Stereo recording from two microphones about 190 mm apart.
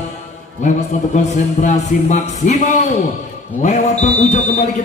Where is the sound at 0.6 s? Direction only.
40° left (ahead or behind).